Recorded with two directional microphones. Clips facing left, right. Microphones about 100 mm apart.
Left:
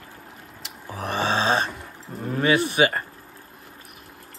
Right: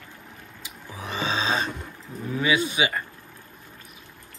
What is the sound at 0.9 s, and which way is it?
Music, 55° left (ahead or behind).